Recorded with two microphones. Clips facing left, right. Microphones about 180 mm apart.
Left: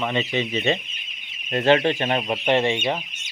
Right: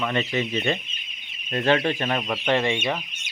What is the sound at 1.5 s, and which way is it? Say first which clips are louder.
Chicken: left 3 dB; 30° left (ahead or behind).